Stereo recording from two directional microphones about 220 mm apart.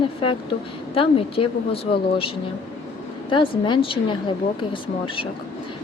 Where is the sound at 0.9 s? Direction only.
25° left (ahead or behind).